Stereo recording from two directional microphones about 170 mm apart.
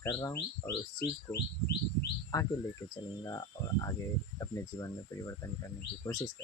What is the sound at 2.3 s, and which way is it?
Speech, 20° left (ahead or behind).